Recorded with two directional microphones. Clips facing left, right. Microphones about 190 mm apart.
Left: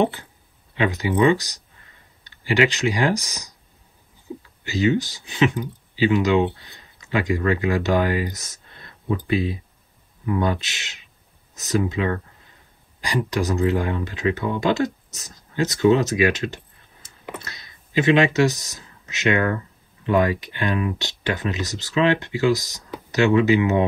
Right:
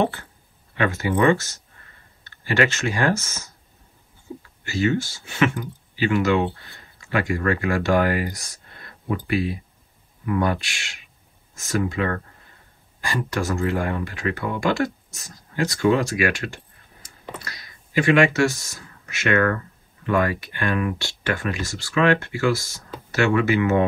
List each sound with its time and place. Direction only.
0.0 s speech: 20° left (ahead or behind)
4.6 s speech: 20° left (ahead or behind)